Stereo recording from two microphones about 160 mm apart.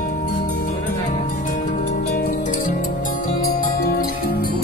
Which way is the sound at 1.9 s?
60° left (ahead or behind).